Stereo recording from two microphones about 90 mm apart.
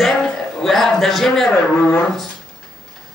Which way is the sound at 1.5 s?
20° left (ahead or behind).